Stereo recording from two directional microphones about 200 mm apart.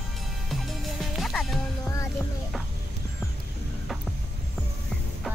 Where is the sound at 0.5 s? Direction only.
Centre (ahead or behind).